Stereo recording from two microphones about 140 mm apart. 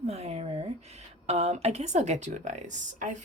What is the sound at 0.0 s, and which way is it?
Speech, 50° right (ahead or behind).